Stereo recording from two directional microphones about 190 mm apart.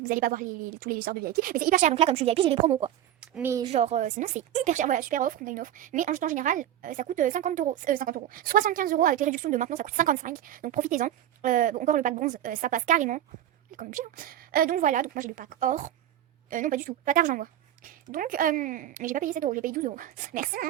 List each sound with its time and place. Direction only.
0.0 s a woman's voice: 45° right (ahead or behind); by 2.9 s 30° right (ahead or behind)
3.2 s a woman's voice: 10° right (ahead or behind)
3.6 s a woman's voice: 35° right (ahead or behind)